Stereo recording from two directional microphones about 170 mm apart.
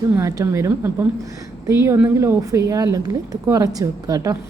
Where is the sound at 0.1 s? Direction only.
15° right (ahead or behind).